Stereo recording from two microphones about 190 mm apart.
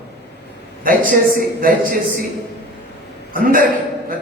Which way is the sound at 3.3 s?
45° right (ahead or behind).